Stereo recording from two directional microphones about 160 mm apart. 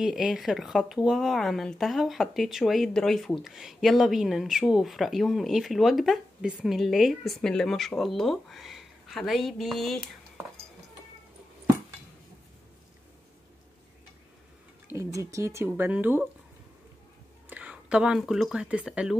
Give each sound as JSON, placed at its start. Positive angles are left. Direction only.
{"t": 0.0, "sound": "speech", "side_deg": 0}
{"t": 14.9, "sound": "speech", "side_deg": -20}
{"t": 17.5, "sound": "speech", "side_deg": -10}